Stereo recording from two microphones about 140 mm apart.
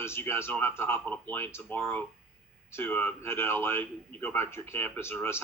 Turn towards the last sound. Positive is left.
turn(degrees=15)  # may be behind; listen again after turning